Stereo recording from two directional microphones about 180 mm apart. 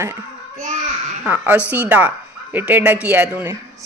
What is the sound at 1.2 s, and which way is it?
Speech, 10° right (ahead or behind).